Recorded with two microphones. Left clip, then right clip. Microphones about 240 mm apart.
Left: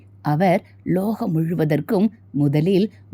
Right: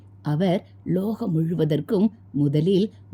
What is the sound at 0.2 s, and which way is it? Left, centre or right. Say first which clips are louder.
Speech: left 6 dB; centre.